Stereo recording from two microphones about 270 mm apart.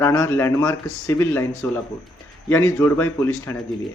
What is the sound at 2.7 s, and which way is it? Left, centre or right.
Speech, centre.